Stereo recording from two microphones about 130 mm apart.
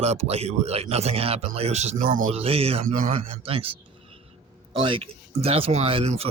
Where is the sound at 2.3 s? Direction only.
50° right (ahead or behind).